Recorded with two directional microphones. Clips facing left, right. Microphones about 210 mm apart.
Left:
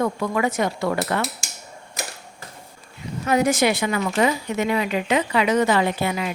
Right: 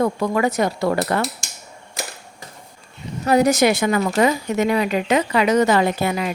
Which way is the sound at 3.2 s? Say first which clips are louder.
Right 4 dB; 35° right (ahead or behind).